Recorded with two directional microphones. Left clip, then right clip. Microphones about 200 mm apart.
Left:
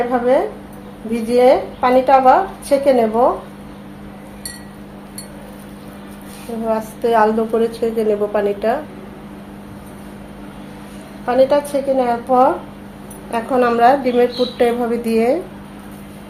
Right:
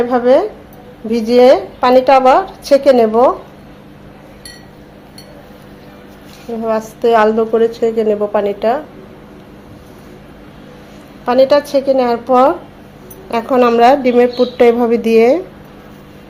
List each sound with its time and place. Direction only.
0.1 s a woman's voice: 50° right (ahead or behind)
6.7 s a woman's voice: 35° right (ahead or behind)
11.3 s a woman's voice: 45° right (ahead or behind)